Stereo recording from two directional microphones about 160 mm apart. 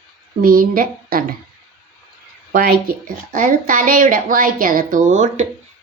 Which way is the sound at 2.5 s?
70° right (ahead or behind).